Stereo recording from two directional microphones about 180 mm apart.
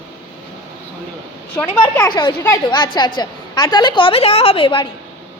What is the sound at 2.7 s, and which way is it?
A woman's voice, 25° left (ahead or behind).